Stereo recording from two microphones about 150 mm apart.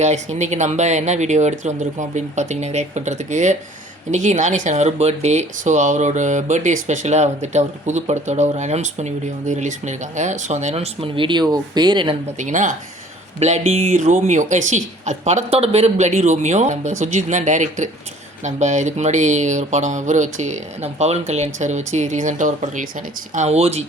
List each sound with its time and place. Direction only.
0.0 s speech: 50° right (ahead or behind); by 12.1 s 30° right (ahead or behind)
12.4 s speech: 55° right (ahead or behind)